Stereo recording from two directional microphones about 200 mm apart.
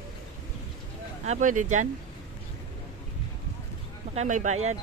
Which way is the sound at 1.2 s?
35° right (ahead or behind).